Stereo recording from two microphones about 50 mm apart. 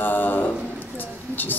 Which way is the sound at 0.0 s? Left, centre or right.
Left.